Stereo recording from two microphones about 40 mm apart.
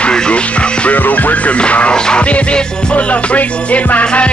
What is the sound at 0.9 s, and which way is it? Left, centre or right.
Music, left.